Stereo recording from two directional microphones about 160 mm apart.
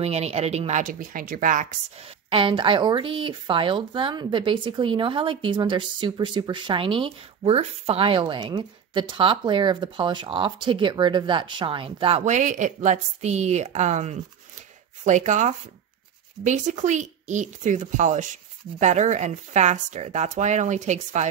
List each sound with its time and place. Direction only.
0.0 s speech: 40° right (ahead or behind); by 1.7 s 55° right (ahead or behind)
2.2 s speech: 35° right (ahead or behind)
12.3 s speech: 50° right (ahead or behind)